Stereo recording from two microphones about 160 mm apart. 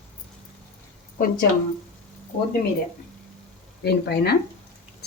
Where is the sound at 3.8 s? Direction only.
90° left.